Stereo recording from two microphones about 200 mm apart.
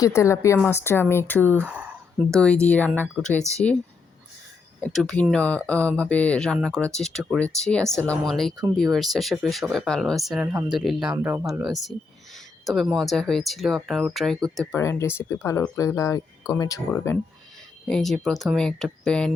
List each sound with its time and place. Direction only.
0.0 s speech: 15° left (ahead or behind)
4.8 s speech: centre (ahead or behind)
17.8 s speech: centre (ahead or behind)